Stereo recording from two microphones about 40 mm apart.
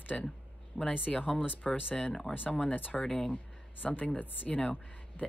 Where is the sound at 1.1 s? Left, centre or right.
Left.